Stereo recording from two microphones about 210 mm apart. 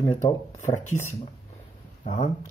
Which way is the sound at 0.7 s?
10° left (ahead or behind).